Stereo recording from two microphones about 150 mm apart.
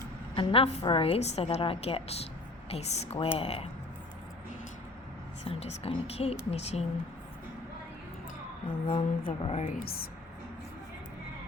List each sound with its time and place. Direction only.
0.3 s a woman's voice: 40° left (ahead or behind)
5.5 s a woman's voice: 45° left (ahead or behind)
8.9 s a woman's voice: 40° left (ahead or behind)
9.7 s speech: 85° left